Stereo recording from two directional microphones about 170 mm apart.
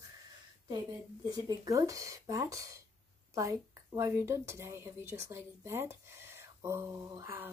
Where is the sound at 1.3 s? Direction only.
20° right (ahead or behind).